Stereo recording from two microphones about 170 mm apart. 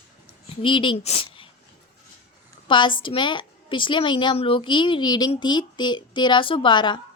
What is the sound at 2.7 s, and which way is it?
A woman's voice, 30° left (ahead or behind).